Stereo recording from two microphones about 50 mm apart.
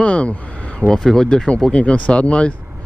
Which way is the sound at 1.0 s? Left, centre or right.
Centre.